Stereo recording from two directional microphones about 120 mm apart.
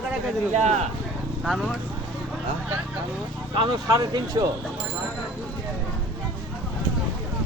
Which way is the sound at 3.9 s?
30° right (ahead or behind).